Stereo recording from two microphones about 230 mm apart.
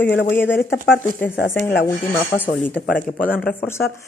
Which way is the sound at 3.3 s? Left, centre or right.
Centre.